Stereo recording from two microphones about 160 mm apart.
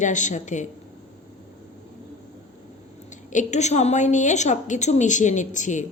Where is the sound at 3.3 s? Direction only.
50° left (ahead or behind).